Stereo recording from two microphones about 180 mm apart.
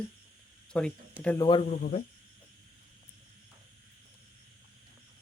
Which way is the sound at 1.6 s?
45° left (ahead or behind).